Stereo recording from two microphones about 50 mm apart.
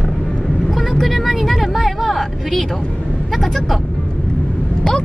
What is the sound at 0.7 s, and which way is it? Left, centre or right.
Vehicle, centre.